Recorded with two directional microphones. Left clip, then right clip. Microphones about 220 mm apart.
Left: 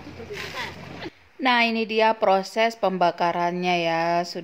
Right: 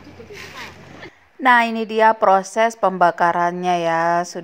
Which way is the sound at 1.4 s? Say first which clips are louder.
Right 6 dB; 15° right (ahead or behind).